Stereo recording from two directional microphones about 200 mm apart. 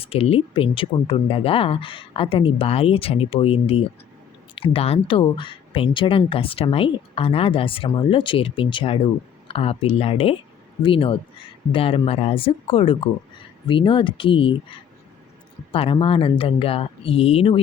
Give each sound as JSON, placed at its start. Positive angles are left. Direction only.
{"t": 0.0, "sound": "speech", "side_deg": 30}